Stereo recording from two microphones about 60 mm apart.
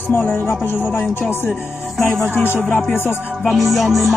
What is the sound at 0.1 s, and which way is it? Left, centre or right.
Music, left.